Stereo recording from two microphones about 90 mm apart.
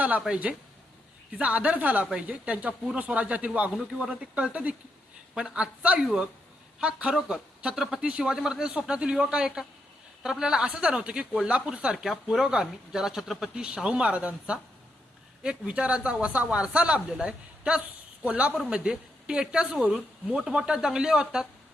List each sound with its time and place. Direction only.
0.0 s speech: 15° right (ahead or behind)